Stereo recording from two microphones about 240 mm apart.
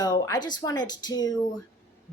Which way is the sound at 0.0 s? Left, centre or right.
Centre.